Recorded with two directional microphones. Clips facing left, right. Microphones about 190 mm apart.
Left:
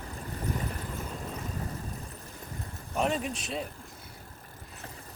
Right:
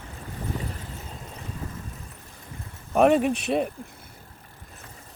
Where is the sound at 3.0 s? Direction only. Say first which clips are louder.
Right 11 dB; 65° right (ahead or behind).